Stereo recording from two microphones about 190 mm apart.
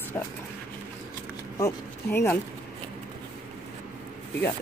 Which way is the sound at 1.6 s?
15° left (ahead or behind).